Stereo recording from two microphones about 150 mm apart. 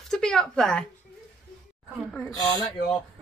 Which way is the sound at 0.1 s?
5° left (ahead or behind).